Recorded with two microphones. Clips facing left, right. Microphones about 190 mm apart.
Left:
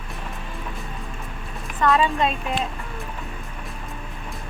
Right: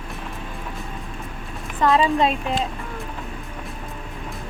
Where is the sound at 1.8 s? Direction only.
30° right (ahead or behind).